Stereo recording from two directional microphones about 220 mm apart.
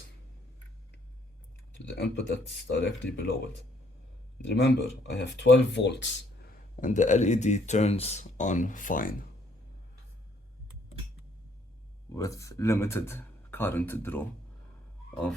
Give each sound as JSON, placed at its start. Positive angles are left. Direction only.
{"t": 2.0, "sound": "speech", "side_deg": 50}
{"t": 4.4, "sound": "speech", "side_deg": 50}
{"t": 6.7, "sound": "speech", "side_deg": 35}
{"t": 12.1, "sound": "speech", "side_deg": 15}